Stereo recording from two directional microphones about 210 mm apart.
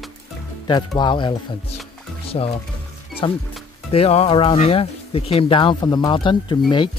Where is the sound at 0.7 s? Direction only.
20° left (ahead or behind).